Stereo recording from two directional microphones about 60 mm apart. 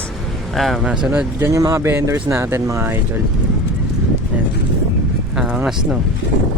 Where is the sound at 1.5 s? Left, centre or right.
Right.